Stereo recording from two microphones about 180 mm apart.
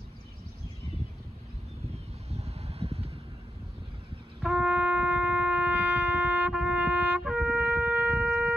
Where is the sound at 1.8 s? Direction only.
35° right (ahead or behind).